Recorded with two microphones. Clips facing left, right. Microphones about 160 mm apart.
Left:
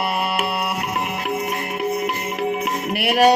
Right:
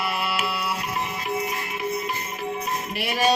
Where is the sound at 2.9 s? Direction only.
65° left (ahead or behind).